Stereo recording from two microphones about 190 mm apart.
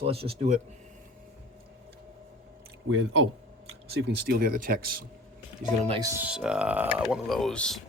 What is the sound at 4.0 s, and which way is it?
Speech, 55° right (ahead or behind).